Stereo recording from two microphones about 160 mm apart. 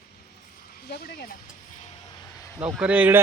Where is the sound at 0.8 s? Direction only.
80° left.